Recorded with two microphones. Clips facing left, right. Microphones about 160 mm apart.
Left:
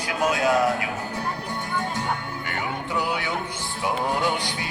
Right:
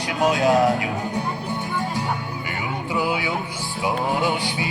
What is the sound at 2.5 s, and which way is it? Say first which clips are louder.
Music: right 1 dB; 5° right (ahead or behind).